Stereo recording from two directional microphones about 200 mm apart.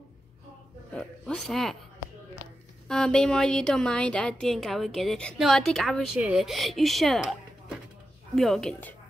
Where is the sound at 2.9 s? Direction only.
5° left (ahead or behind).